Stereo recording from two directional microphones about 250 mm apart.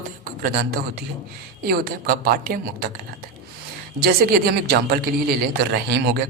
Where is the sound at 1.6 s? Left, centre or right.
Right.